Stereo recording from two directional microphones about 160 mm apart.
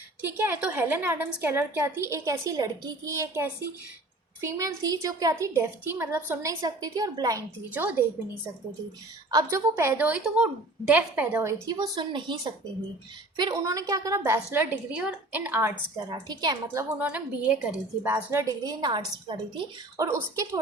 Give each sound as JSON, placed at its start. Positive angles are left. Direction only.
{"t": 0.2, "sound": "a woman's voice", "side_deg": -15}
{"t": 6.6, "sound": "a woman's voice", "side_deg": -25}
{"t": 7.7, "sound": "a woman's voice", "side_deg": -10}
{"t": 9.3, "sound": "a woman's voice", "side_deg": -15}
{"t": 11.6, "sound": "a woman's voice", "side_deg": -25}
{"t": 16.1, "sound": "a woman's voice", "side_deg": -25}
{"t": 17.0, "sound": "a woman's voice", "side_deg": -10}
{"t": 20.1, "sound": "a woman's voice", "side_deg": -20}